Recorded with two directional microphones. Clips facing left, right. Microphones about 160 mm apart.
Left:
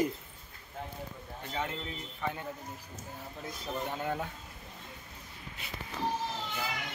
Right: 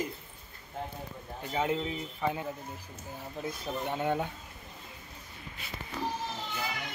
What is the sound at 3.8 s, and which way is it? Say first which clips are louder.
Speech: right 6 dB; centre (ahead or behind).